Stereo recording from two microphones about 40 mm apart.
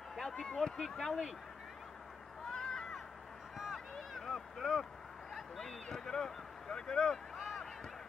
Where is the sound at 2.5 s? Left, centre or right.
Centre.